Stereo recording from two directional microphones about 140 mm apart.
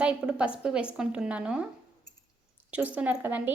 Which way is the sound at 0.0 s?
10° right (ahead or behind).